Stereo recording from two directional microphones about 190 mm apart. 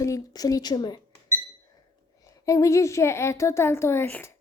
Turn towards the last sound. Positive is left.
turn(degrees=15)  # may be behind; listen again after turning